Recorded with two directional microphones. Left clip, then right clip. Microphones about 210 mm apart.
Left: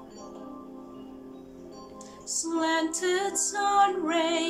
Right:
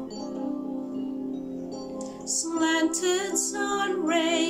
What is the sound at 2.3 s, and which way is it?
Music, 5° right (ahead or behind).